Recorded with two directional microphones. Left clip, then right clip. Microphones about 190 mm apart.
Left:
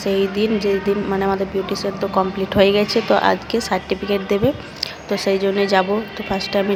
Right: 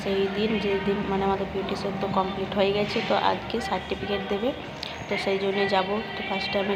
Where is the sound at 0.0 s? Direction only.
45° left (ahead or behind).